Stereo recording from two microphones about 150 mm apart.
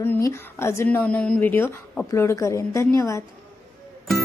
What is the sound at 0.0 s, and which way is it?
Speech, 15° left (ahead or behind).